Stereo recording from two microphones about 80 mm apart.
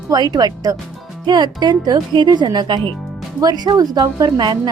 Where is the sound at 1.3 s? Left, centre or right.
Right.